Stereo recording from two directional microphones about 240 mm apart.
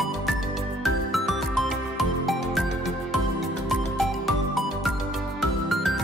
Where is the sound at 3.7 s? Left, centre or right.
Centre.